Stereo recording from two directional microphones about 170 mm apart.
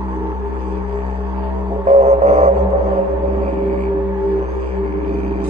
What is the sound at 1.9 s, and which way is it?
Music, 40° right (ahead or behind).